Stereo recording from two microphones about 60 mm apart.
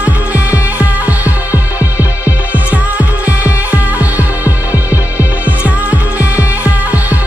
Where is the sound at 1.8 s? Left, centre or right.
Left.